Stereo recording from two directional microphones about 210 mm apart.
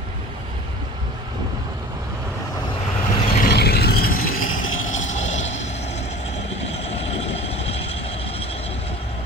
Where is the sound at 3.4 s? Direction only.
50° left (ahead or behind).